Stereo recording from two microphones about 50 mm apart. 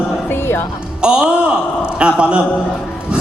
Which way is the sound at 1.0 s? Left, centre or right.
Centre.